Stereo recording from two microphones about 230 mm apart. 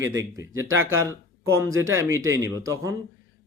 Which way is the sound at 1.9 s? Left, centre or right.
Centre.